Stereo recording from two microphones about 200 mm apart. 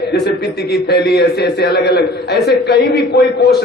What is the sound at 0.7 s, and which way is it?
A man's voice, 55° left (ahead or behind).